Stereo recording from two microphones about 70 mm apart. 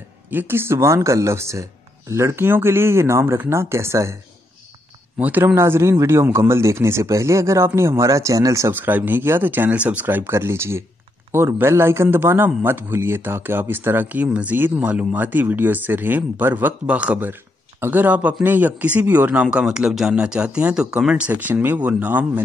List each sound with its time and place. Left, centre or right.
0.3 s speech: right
5.2 s speech: right
5.5 s speech: right
8.7 s speech: right
16.8 s speech: centre
17.3 s speech: right
19.4 s speech: centre
21.3 s speech: right